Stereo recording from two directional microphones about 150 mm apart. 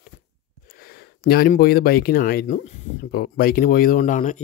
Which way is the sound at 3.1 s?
85° left.